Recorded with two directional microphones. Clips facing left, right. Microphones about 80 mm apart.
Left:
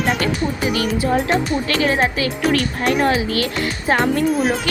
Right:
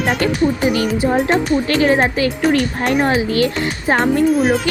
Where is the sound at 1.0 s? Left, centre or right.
Right.